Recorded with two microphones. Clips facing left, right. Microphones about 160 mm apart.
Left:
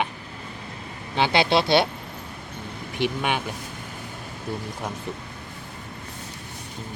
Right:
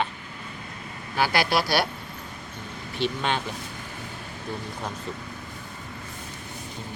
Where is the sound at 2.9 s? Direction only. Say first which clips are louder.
Left 1 dB; 15° left (ahead or behind).